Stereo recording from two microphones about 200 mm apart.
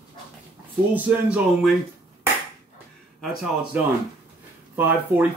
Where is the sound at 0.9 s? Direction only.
5° right (ahead or behind).